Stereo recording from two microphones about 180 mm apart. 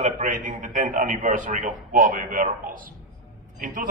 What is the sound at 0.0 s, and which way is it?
A man's voice, 45° right (ahead or behind).